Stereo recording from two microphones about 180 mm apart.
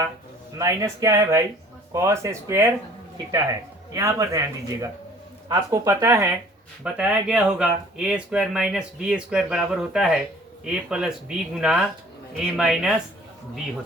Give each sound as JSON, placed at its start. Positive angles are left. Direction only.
{"t": 0.6, "sound": "a man's voice", "side_deg": -20}
{"t": 3.9, "sound": "a man's voice", "side_deg": -15}
{"t": 6.8, "sound": "speech", "side_deg": -5}